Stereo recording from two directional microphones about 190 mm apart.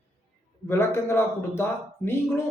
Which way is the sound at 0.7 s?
15° left (ahead or behind).